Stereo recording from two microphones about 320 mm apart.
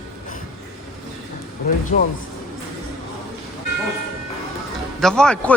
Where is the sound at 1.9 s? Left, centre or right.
Left.